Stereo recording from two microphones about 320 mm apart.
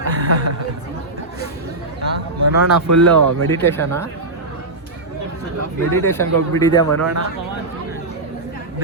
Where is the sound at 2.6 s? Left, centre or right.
Right.